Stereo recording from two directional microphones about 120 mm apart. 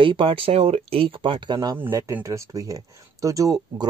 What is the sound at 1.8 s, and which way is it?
Speech, 20° right (ahead or behind).